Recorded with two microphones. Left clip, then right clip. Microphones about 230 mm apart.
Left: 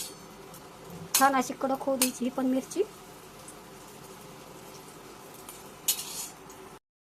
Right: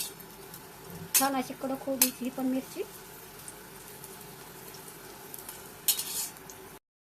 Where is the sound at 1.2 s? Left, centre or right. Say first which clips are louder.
Left 8 dB; left.